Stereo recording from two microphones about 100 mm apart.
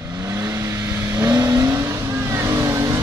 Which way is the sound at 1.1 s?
30° right (ahead or behind).